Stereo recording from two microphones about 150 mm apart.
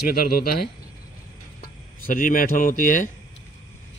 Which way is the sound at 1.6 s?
65° left (ahead or behind).